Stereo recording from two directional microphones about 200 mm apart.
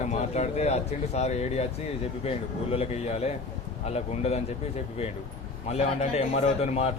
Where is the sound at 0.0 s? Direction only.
35° left (ahead or behind).